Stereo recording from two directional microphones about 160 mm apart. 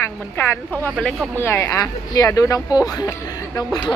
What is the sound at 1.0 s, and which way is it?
Speech, centre (ahead or behind).